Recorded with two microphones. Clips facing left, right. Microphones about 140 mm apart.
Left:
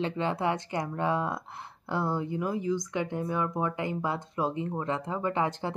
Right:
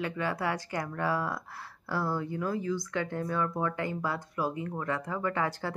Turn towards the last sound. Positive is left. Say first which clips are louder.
# left 2 dB
turn(degrees=20)  # may be behind; listen again after turning